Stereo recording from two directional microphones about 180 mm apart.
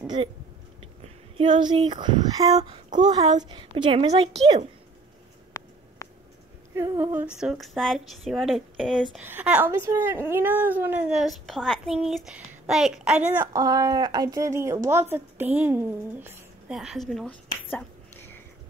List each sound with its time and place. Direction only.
0.0 s a woman's voice: 25° right (ahead or behind)
5.5 s a sound: 20° left (ahead or behind)
6.7 s speech: 15° right (ahead or behind); by 9.2 s centre (ahead or behind)
9.2 s speech: 10° right (ahead or behind); by 18.4 s 10° left (ahead or behind)